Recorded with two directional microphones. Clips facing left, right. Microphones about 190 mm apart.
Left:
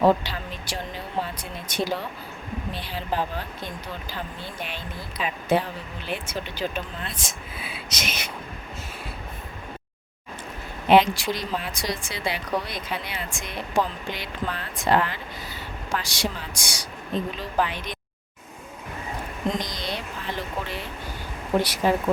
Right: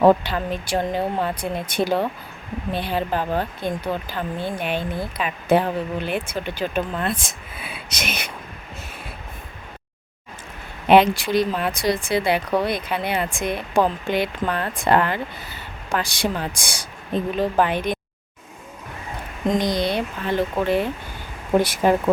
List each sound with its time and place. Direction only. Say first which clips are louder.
0.0 s speech: right 5 dB; 55° right (ahead or behind)
10.8 s a woman's voice: right 3 dB; 60° right (ahead or behind)
19.5 s a woman's voice: right 9 dB; 60° right (ahead or behind)